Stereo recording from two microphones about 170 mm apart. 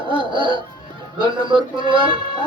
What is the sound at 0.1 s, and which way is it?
Music, 30° right (ahead or behind).